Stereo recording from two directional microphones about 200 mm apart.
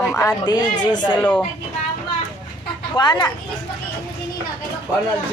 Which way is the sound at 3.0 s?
20° left (ahead or behind).